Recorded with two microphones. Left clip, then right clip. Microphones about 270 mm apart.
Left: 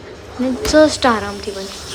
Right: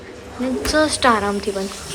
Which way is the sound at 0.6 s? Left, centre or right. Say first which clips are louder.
Left 4 dB; centre.